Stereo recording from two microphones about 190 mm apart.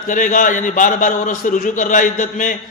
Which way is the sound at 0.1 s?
45° left (ahead or behind).